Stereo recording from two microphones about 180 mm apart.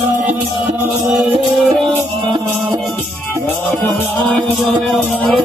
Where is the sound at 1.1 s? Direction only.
Centre (ahead or behind).